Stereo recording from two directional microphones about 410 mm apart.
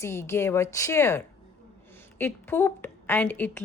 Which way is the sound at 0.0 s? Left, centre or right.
Centre.